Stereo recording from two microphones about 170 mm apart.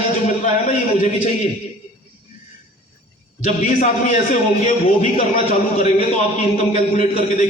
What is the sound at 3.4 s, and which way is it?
A man's voice, 45° left (ahead or behind).